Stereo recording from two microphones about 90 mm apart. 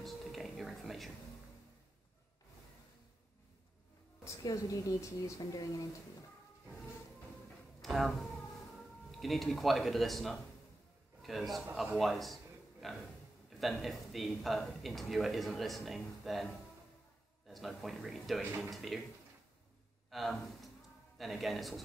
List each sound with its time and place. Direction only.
0.0 s a sound: centre (ahead or behind)
4.2 s music: 35° left (ahead or behind)
4.5 s speech: 40° left (ahead or behind)
7.8 s speech: centre (ahead or behind)
12.8 s a sound: centre (ahead or behind)
13.5 s speech: centre (ahead or behind)
17.5 s speech: centre (ahead or behind)
20.1 s speech: centre (ahead or behind)